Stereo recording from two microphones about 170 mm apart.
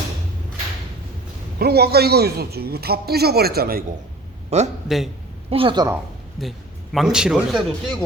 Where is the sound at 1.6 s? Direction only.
70° right (ahead or behind).